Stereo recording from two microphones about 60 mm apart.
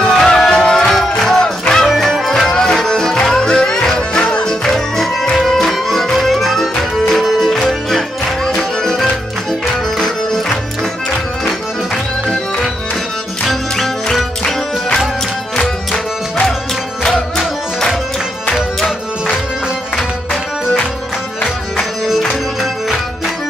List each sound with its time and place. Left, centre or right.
0.0 s music: centre
13.5 s music: centre
21.7 s music: centre